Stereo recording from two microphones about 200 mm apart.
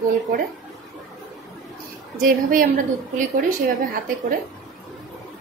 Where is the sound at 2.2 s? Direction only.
45° right (ahead or behind).